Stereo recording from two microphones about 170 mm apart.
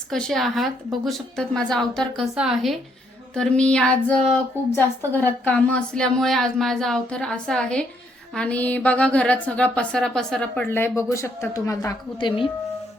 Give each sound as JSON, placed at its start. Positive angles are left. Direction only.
{"t": 0.1, "sound": "a woman's voice", "side_deg": 5}
{"t": 10.7, "sound": "a woman's voice", "side_deg": 15}